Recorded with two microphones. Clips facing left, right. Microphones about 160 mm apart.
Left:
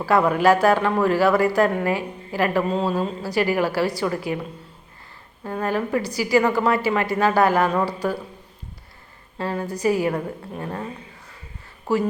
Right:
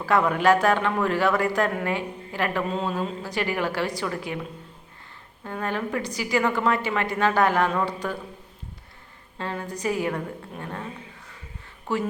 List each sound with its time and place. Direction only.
0.0 s a woman's voice: 5° left (ahead or behind)
2.6 s speech: 35° left (ahead or behind)
3.2 s a woman's voice: 5° left (ahead or behind)
5.4 s a woman's voice: 10° left (ahead or behind)
9.4 s a woman's voice: 5° left (ahead or behind)